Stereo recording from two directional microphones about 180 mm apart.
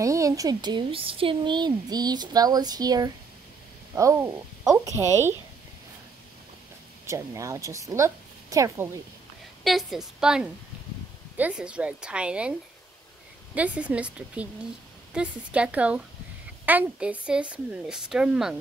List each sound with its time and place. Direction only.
0.0 s a woman's voice: 15° right (ahead or behind)
7.1 s speech: 15° right (ahead or behind)
9.6 s speech: centre (ahead or behind)
13.6 s a woman's voice: 5° right (ahead or behind)